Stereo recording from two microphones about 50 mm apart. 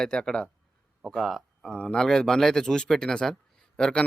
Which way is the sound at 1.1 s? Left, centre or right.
Centre.